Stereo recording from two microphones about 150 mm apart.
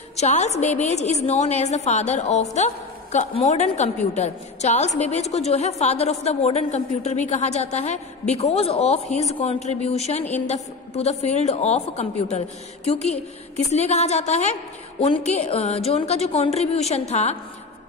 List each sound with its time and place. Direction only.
0.1 s a woman's voice: 50° left (ahead or behind)